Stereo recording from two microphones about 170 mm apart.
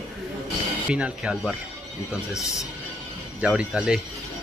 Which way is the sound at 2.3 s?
20° left (ahead or behind).